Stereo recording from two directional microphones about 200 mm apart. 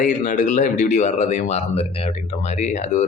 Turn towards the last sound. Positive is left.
turn(degrees=35)  # may be behind; listen again after turning